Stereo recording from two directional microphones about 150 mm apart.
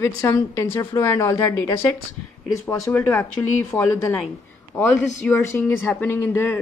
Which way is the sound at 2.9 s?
20° left (ahead or behind).